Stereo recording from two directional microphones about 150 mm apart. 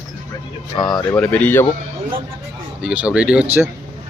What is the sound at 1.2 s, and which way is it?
Speech, 10° left (ahead or behind).